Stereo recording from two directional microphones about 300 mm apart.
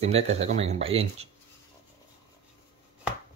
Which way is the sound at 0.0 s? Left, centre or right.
Right.